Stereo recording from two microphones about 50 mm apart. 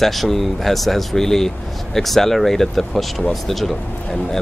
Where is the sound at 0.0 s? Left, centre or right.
Centre.